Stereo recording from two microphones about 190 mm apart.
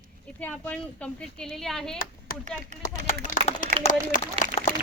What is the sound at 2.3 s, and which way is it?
Speech, 50° left (ahead or behind).